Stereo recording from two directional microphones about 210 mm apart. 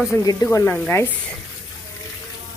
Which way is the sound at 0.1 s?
15° left (ahead or behind).